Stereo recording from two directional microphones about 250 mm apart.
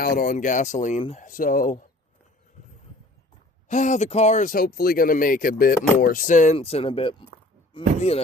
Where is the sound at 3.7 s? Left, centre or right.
Left.